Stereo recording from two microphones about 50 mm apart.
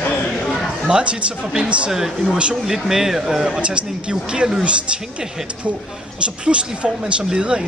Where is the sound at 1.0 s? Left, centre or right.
Right.